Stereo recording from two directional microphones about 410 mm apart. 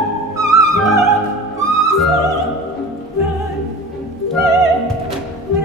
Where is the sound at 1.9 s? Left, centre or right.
Centre.